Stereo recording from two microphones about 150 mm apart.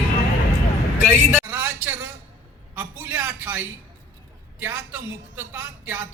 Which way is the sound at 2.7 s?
15° right (ahead or behind).